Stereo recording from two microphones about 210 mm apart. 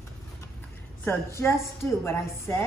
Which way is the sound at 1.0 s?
10° left (ahead or behind).